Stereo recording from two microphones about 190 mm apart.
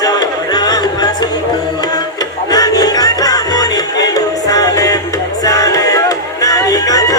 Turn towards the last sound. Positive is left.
turn(degrees=20)  # may be behind; listen again after turning